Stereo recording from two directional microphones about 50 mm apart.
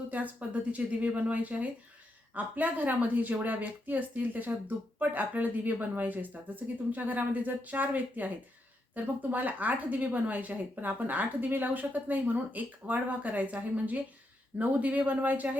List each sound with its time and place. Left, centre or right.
0.1 s speech: right